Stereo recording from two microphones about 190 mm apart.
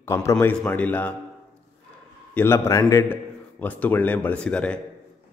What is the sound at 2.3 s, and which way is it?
A man's voice, 15° left (ahead or behind).